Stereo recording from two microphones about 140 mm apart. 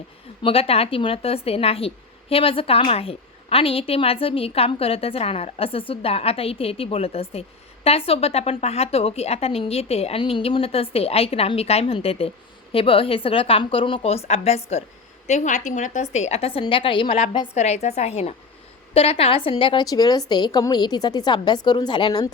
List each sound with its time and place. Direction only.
0.4 s a woman's voice: 45° left (ahead or behind)
15.3 s a woman's voice: 60° left (ahead or behind); by 17.2 s 35° left (ahead or behind)
17.5 s a woman's voice: 50° left (ahead or behind); by 22.3 s 30° left (ahead or behind)